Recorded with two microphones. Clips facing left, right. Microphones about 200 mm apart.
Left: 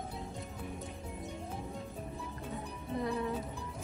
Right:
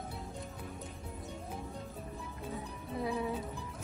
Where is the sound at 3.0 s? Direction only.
5° right (ahead or behind).